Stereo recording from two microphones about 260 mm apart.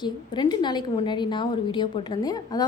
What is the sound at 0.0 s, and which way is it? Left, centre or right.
A woman's voice, centre.